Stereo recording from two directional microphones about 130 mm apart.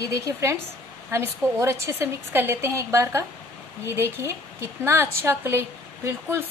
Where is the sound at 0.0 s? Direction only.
25° right (ahead or behind).